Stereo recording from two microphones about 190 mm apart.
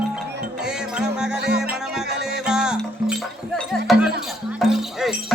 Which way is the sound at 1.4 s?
60° right (ahead or behind).